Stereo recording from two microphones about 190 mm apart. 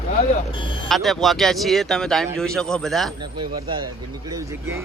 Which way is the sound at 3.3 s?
25° right (ahead or behind).